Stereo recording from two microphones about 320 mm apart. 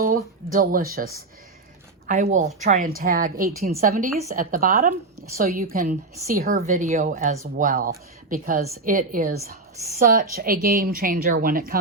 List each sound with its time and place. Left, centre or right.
0.5 s a woman's voice: right